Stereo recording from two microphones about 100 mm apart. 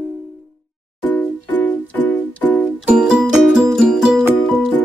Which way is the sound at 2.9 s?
10° right (ahead or behind).